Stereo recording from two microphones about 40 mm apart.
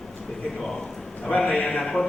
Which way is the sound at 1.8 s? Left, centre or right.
Centre.